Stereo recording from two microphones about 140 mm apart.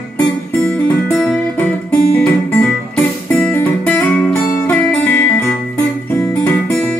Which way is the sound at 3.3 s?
10° left (ahead or behind).